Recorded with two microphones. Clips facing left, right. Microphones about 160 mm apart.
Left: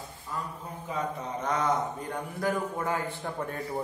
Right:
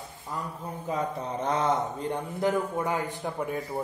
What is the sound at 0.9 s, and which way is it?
A man's voice, 35° right (ahead or behind).